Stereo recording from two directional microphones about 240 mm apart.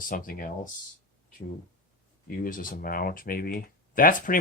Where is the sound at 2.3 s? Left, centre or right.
Left.